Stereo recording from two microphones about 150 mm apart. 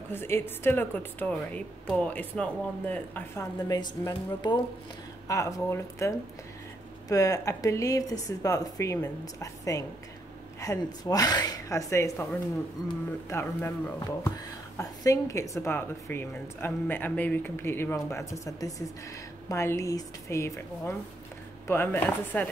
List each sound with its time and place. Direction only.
0.1 s a woman's voice: 15° left (ahead or behind)
3.6 s speech: 25° left (ahead or behind)
13.3 s a woman's voice: 15° left (ahead or behind)